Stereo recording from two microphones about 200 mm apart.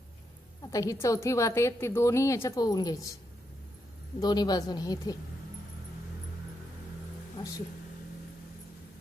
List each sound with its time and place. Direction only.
0.6 s a woman's voice: 15° left (ahead or behind)
4.2 s a woman's voice: 20° left (ahead or behind)